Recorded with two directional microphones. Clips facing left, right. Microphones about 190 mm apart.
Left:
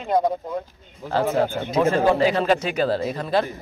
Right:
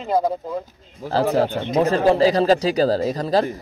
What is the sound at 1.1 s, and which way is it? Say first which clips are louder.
A man's voice: right 2 dB; 35° right (ahead or behind).